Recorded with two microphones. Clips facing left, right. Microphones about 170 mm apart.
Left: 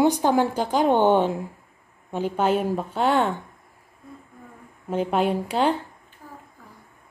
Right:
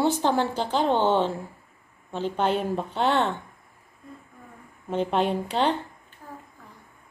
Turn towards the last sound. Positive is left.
turn(degrees=10)  # may be behind; listen again after turning